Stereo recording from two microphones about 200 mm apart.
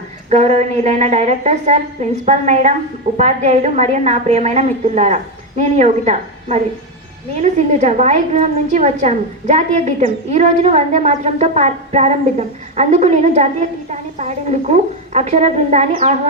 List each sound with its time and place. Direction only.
0.3 s a woman's voice: 35° right (ahead or behind)